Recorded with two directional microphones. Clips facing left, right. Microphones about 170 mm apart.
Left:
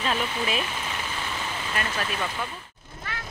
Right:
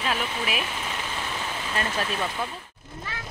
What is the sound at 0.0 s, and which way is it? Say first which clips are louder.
Speech: left 1 dB; 5° right (ahead or behind).